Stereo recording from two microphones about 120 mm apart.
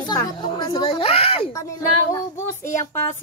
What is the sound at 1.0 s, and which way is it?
Speech, 55° left (ahead or behind).